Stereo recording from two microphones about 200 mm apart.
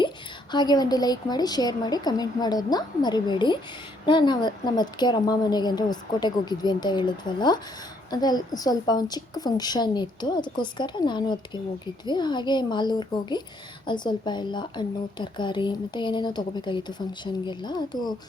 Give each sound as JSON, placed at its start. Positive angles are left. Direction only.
{"t": 0.5, "sound": "a woman's voice", "side_deg": 20}